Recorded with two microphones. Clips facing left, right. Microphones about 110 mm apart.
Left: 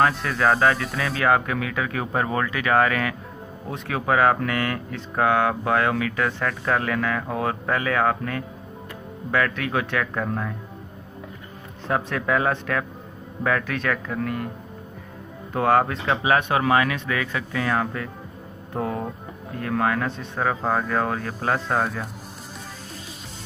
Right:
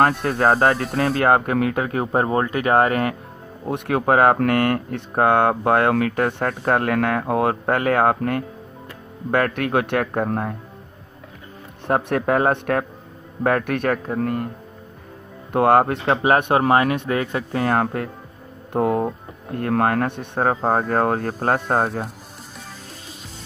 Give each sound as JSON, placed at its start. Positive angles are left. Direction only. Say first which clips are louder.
{"t": 0.0, "sound": "speech", "louder": "right 3 dB", "side_deg": -50}
{"t": 0.3, "sound": "speech", "louder": "right 3 dB", "side_deg": -35}
{"t": 3.7, "sound": "speech", "louder": "right 7 dB", "side_deg": -60}
{"t": 4.0, "sound": "speech", "louder": "right 3 dB", "side_deg": -50}
{"t": 10.1, "sound": "speech", "louder": "right 4 dB", "side_deg": -45}
{"t": 11.9, "sound": "speech", "louder": "right 4 dB", "side_deg": -45}
{"t": 15.5, "sound": "speech", "louder": "right 4 dB", "side_deg": -50}
{"t": 16.5, "sound": "speech", "louder": "right 4 dB", "side_deg": -45}
{"t": 19.5, "sound": "speech", "louder": "right 4 dB", "side_deg": -55}